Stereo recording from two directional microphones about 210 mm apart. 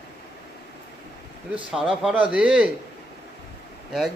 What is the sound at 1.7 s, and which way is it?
Speech, 5° right (ahead or behind).